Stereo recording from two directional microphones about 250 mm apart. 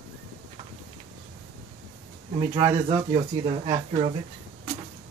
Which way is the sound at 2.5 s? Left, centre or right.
Centre.